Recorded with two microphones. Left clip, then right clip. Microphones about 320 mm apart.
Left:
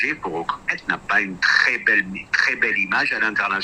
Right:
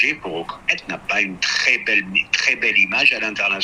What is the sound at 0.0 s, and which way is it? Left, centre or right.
A man's voice, centre.